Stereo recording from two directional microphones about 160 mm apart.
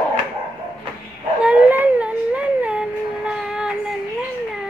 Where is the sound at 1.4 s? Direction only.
10° right (ahead or behind).